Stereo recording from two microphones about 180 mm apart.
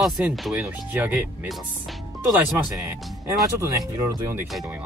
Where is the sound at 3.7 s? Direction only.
20° right (ahead or behind).